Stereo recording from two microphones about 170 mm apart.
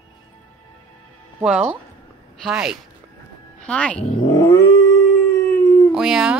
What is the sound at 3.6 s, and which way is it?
Speech, 5° left (ahead or behind).